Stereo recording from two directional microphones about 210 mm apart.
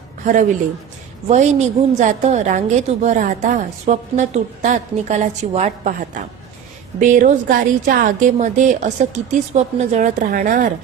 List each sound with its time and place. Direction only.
1.3 s a woman's voice: 30° right (ahead or behind)